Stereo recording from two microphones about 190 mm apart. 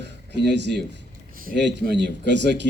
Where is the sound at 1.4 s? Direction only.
55° right (ahead or behind).